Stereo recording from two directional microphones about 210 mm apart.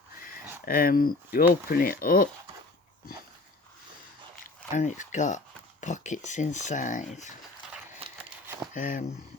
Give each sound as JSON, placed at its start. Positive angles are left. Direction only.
{"t": 0.6, "sound": "speech", "side_deg": 45}
{"t": 4.7, "sound": "speech", "side_deg": 35}
{"t": 7.9, "sound": "a sound", "side_deg": -25}
{"t": 8.7, "sound": "speech", "side_deg": 40}